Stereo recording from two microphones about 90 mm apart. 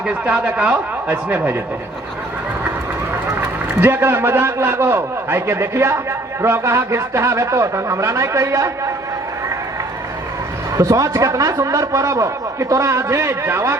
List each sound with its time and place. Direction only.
0.1 s a man's voice: 15° right (ahead or behind)
3.4 s a man's voice: 25° right (ahead or behind)
10.8 s a man's voice: 40° right (ahead or behind)